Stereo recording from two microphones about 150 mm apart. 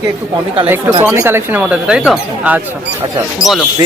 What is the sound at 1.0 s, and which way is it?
Speech, 15° right (ahead or behind).